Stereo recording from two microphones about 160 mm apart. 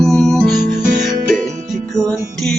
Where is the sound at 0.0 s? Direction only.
Centre (ahead or behind).